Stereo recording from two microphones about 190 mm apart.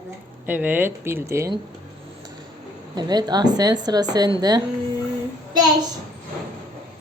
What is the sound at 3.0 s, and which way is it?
A woman's voice, 20° right (ahead or behind).